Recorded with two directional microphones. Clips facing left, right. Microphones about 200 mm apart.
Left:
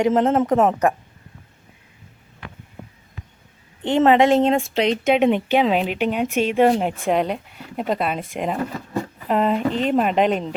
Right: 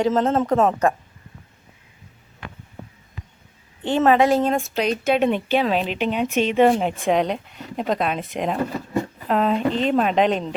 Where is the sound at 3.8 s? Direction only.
25° left (ahead or behind).